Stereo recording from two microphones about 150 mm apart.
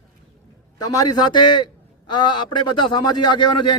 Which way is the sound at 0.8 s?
25° left (ahead or behind).